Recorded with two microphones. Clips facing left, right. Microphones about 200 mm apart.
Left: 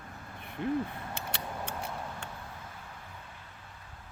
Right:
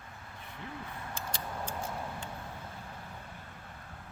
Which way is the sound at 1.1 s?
65° left (ahead or behind).